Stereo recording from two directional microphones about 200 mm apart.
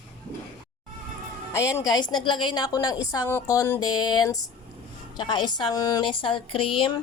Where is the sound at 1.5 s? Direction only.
15° left (ahead or behind).